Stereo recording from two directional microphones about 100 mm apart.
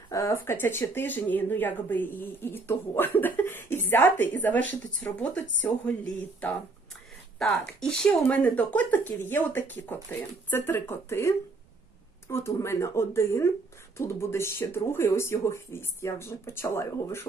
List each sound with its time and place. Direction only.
0.1 s speech: 30° left (ahead or behind)
7.3 s speech: 5° left (ahead or behind); by 17.2 s 25° left (ahead or behind)